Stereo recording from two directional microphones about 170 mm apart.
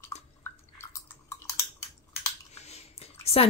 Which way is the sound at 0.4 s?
15° left (ahead or behind).